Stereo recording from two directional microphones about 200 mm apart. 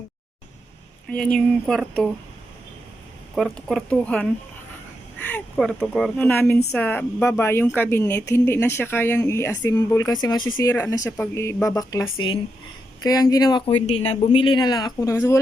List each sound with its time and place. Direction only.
1.1 s speech: 5° left (ahead or behind)
3.3 s speech: centre (ahead or behind)
5.3 s a woman's voice: centre (ahead or behind)